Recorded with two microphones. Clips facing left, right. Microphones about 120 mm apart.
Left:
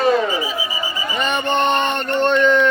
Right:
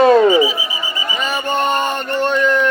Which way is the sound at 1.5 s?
5° right (ahead or behind).